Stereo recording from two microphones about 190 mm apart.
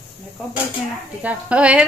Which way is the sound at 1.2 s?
5° right (ahead or behind).